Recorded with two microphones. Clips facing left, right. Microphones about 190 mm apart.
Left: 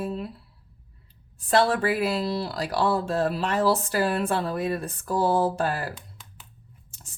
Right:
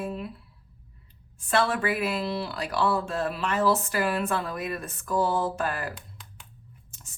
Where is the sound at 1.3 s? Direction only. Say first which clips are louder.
Left 4 dB; 35° left (ahead or behind).